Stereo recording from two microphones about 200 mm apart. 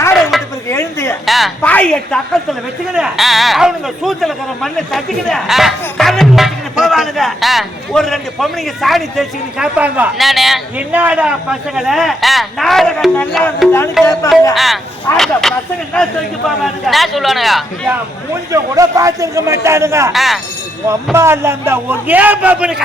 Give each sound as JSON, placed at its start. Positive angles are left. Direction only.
{"t": 0.1, "sound": "a sound", "side_deg": 0}
{"t": 0.7, "sound": "a sound", "side_deg": 10}
{"t": 1.2, "sound": "a woman's voice", "side_deg": 0}
{"t": 18.5, "sound": "a man's voice", "side_deg": -15}
{"t": 20.1, "sound": "a woman's voice", "side_deg": 0}
{"t": 20.8, "sound": "a man's voice", "side_deg": -15}